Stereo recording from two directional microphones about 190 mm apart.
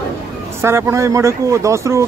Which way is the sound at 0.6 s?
15° right (ahead or behind).